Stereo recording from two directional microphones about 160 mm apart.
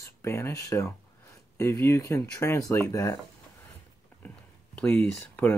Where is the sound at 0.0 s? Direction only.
15° left (ahead or behind).